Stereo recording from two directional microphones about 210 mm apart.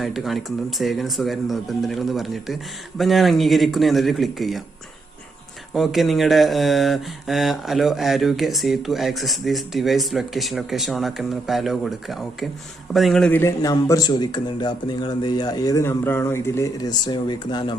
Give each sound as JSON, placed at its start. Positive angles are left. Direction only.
{"t": 0.0, "sound": "speech", "side_deg": 0}
{"t": 5.7, "sound": "a man's voice", "side_deg": 0}